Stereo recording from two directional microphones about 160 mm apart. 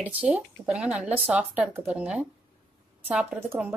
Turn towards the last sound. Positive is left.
turn(degrees=-10)  # may be behind; listen again after turning